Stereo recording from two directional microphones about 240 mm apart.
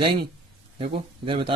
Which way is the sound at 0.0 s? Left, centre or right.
Right.